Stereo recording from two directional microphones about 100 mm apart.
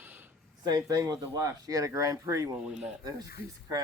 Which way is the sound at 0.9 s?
35° right (ahead or behind).